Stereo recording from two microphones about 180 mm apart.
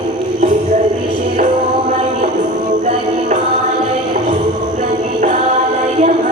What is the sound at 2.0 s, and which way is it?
Music, 45° right (ahead or behind).